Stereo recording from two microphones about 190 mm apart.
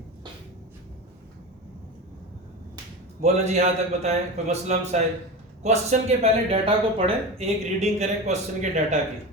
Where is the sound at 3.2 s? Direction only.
35° right (ahead or behind).